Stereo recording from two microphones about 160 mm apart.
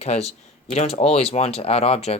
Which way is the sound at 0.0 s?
40° left (ahead or behind).